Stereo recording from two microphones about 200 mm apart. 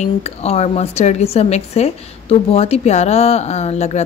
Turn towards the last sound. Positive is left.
turn(degrees=35)  # may be behind; listen again after turning